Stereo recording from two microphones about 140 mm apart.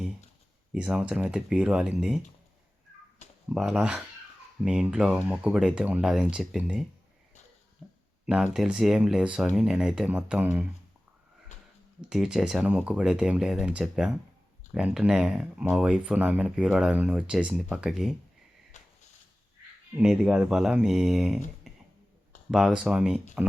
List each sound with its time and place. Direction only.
0.7 s speech: 5° right (ahead or behind)
3.5 s speech: 5° right (ahead or behind)
7.8 s a sound: 5° right (ahead or behind)
8.3 s speech: 5° right (ahead or behind)
12.0 s speech: 5° right (ahead or behind)
18.8 s a sound: 55° left (ahead or behind)
20.0 s speech: 5° right (ahead or behind)
21.7 s a sound: centre (ahead or behind)
22.5 s speech: 5° right (ahead or behind)